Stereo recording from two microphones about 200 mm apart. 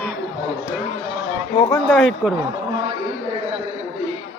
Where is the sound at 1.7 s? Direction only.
5° left (ahead or behind).